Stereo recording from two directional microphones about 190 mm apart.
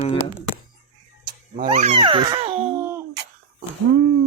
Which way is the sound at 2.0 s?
25° right (ahead or behind).